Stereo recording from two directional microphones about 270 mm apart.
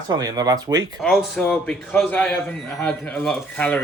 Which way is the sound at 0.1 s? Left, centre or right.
Centre.